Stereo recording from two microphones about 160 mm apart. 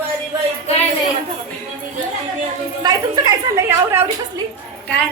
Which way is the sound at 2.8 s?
25° right (ahead or behind).